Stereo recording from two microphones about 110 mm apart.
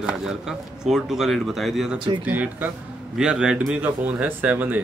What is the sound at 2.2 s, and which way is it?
Speech, 15° right (ahead or behind).